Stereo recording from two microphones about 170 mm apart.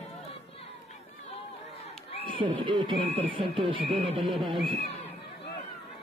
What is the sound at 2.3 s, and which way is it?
Speech, 30° right (ahead or behind).